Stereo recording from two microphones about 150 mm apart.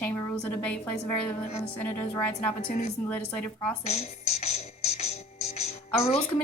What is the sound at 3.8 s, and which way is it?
Speech, 50° left (ahead or behind).